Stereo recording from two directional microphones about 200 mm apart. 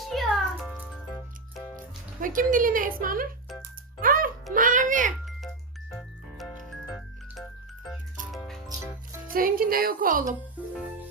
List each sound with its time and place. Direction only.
0.1 s music: centre (ahead or behind)
2.2 s a woman's voice: 40° right (ahead or behind)
4.0 s music: 45° right (ahead or behind)
4.5 s a sound: 40° right (ahead or behind)
5.2 s music: centre (ahead or behind)
6.9 s music: centre (ahead or behind)
9.3 s a woman's voice: 45° right (ahead or behind)